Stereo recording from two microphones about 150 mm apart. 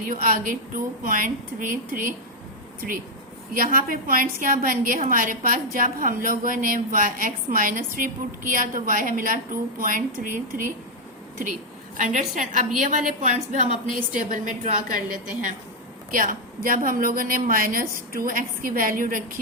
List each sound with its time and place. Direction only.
0.0 s a woman's voice: 70° right (ahead or behind)
3.5 s a woman's voice: 65° right (ahead or behind)
11.9 s a woman's voice: 60° right (ahead or behind)
14.1 s a woman's voice: 60° right (ahead or behind)